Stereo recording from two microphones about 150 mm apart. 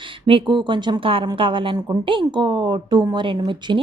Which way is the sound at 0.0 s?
35° right (ahead or behind).